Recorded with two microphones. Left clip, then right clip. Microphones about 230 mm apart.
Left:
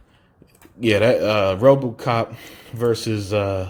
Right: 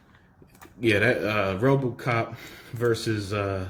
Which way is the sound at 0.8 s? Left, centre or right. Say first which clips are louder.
Left 6 dB; left.